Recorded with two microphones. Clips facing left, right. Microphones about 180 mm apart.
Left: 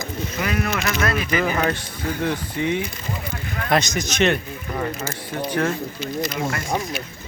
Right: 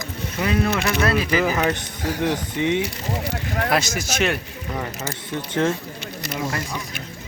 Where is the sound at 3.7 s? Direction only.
5° right (ahead or behind).